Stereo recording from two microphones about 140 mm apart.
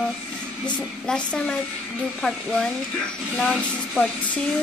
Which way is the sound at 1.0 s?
5° left (ahead or behind).